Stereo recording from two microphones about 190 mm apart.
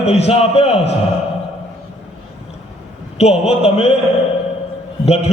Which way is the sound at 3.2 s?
35° left (ahead or behind).